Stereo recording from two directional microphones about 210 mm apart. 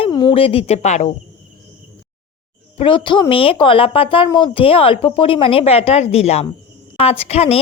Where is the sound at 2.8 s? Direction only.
25° left (ahead or behind).